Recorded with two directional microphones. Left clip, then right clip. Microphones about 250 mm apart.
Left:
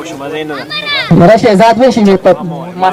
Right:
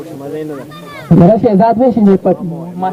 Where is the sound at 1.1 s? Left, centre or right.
Left.